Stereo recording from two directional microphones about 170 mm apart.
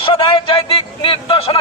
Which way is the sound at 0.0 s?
30° left (ahead or behind).